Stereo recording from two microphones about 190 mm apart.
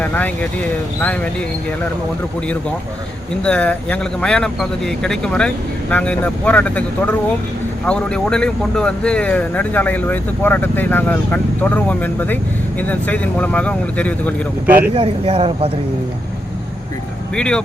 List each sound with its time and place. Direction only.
0.0 s speech: 10° left (ahead or behind)
3.4 s speech: 5° left (ahead or behind)
14.9 s speech: 30° right (ahead or behind)
17.3 s speech: 5° left (ahead or behind)